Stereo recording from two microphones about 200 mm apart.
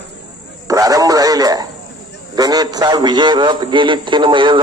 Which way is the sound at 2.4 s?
20° right (ahead or behind).